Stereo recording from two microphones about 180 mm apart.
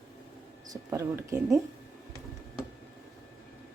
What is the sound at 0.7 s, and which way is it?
Speech, 15° right (ahead or behind).